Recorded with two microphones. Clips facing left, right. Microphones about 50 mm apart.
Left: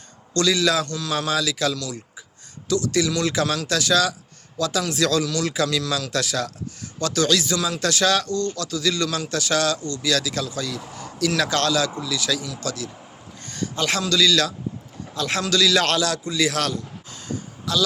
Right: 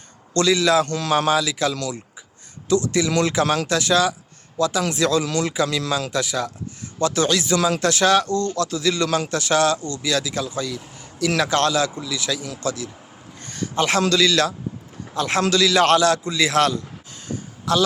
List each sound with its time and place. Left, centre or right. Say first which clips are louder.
0.3 s speech: right 3 dB; right
0.9 s a man's voice: right 5 dB; right
1.3 s speech: right 3 dB; right
6.1 s speech: right 1 dB; centre
9.0 s a man's voice: right 5 dB; right
9.3 s speech: right 2 dB; right
13.4 s a sound: right 3 dB; right
14.0 s a man's voice: left 1 dB; right